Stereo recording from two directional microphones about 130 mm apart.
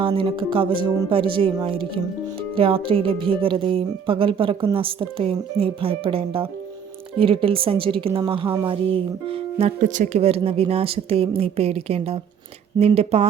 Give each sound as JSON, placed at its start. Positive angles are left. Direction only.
{"t": 0.0, "sound": "speech", "side_deg": -40}
{"t": 9.8, "sound": "speech", "side_deg": -80}
{"t": 10.2, "sound": "speech", "side_deg": -50}